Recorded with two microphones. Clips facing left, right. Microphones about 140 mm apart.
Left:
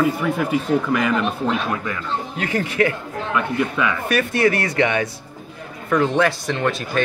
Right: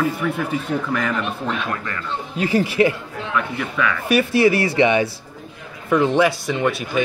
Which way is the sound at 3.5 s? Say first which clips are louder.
Left 2 dB; 15° left (ahead or behind).